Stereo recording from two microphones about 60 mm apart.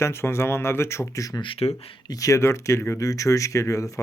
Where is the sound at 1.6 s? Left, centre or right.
Left.